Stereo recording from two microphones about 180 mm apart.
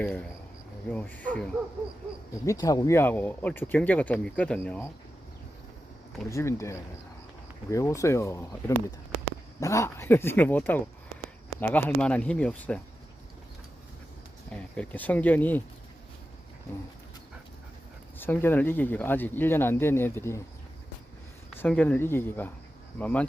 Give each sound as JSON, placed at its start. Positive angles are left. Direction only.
{"t": 0.0, "sound": "speech", "side_deg": 5}
{"t": 2.5, "sound": "speech", "side_deg": 20}
{"t": 6.2, "sound": "speech", "side_deg": 15}
{"t": 14.5, "sound": "speech", "side_deg": 10}
{"t": 18.2, "sound": "speech", "side_deg": 10}
{"t": 21.5, "sound": "speech", "side_deg": 10}